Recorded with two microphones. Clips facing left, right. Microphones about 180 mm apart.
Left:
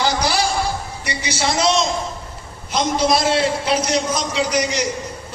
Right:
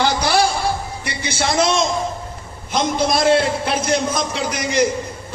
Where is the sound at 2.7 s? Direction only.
50° right (ahead or behind).